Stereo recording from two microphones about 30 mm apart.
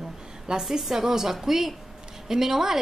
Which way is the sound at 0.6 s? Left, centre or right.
Centre.